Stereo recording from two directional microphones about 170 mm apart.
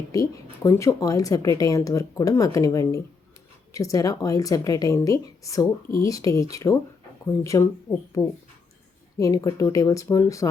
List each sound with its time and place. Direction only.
0.1 s speech: 20° left (ahead or behind)
9.1 s speech: 20° left (ahead or behind)